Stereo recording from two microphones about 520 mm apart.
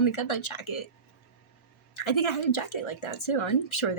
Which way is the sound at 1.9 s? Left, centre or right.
Left.